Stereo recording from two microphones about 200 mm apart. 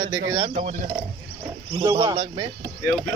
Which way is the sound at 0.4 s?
25° right (ahead or behind).